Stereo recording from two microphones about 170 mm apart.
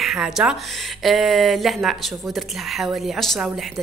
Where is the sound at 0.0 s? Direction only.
Centre (ahead or behind).